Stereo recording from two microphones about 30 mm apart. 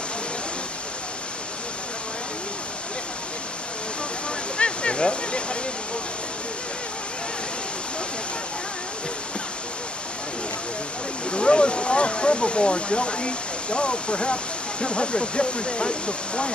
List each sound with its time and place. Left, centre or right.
4.6 s waterfall: left
11.2 s speech: left